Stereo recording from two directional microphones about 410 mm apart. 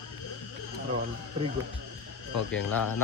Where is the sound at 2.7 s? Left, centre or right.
Left.